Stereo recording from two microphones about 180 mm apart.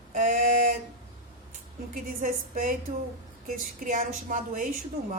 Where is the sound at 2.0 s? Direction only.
45° right (ahead or behind).